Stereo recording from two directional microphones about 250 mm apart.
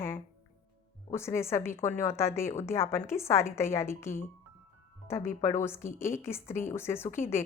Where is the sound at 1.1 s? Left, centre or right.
Centre.